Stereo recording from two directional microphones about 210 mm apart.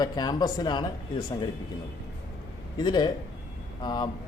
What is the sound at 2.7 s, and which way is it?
A man's voice, 20° left (ahead or behind).